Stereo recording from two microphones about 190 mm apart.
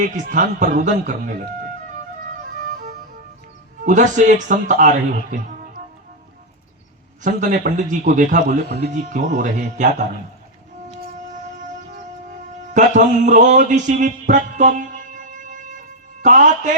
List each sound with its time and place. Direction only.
0.0 s a man's voice: 40° right (ahead or behind)
3.8 s a man's voice: 40° right (ahead or behind)
7.2 s a man's voice: 45° right (ahead or behind)
12.7 s a man's voice: 40° right (ahead or behind)